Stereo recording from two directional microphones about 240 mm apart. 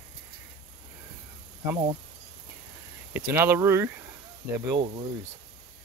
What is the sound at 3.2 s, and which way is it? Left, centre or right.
Speech, centre.